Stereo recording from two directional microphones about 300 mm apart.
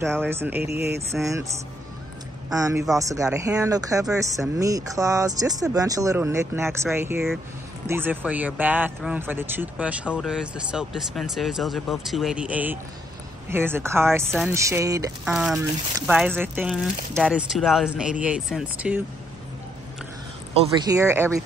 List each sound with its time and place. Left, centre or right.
0.3 s speech: centre
0.7 s speech: right
2.5 s speech: centre
20.7 s speech: centre